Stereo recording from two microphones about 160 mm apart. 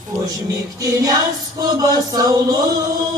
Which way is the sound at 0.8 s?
25° right (ahead or behind).